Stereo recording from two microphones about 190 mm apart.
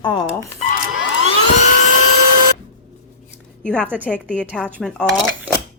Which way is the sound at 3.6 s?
5° left (ahead or behind).